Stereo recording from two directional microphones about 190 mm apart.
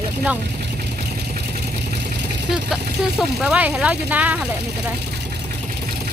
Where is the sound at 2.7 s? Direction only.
5° right (ahead or behind).